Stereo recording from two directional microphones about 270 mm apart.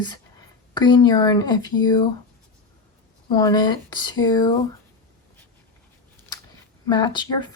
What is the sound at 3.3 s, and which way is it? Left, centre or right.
Speech, centre.